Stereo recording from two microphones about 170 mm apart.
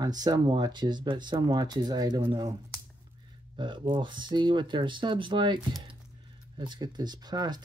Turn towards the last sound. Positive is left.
turn(degrees=-25)  # may be behind; listen again after turning